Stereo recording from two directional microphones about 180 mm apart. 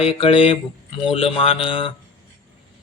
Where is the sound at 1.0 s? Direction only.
30° left (ahead or behind).